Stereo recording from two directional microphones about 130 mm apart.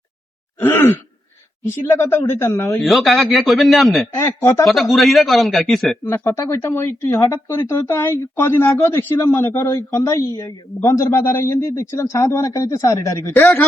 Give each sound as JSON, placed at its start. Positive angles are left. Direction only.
{"t": 0.6, "sound": "a sound", "side_deg": 15}
{"t": 1.6, "sound": "a man's voice", "side_deg": 20}
{"t": 2.6, "sound": "a man's voice", "side_deg": 0}
{"t": 4.1, "sound": "a man's voice", "side_deg": 20}
{"t": 4.6, "sound": "a man's voice", "side_deg": 0}
{"t": 6.1, "sound": "a man's voice", "side_deg": 20}